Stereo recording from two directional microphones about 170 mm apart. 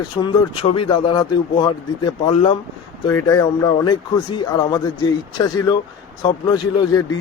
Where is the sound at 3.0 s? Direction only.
20° left (ahead or behind).